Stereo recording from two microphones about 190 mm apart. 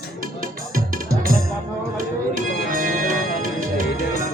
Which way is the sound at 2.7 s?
45° right (ahead or behind).